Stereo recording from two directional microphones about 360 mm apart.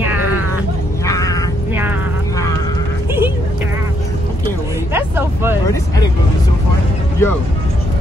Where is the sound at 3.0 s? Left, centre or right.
Centre.